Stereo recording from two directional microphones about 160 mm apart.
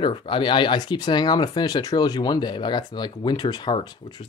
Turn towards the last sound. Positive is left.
turn(degrees=30)  # may be behind; listen again after turning